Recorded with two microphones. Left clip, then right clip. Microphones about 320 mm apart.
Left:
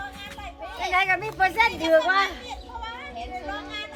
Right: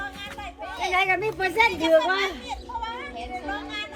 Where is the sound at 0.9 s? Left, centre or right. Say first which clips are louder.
Left 1 dB; left.